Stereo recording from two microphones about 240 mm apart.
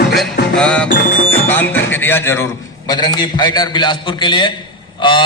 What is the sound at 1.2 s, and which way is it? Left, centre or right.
A man's voice, centre.